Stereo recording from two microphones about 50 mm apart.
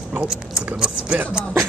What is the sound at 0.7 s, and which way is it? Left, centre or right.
Speech, centre.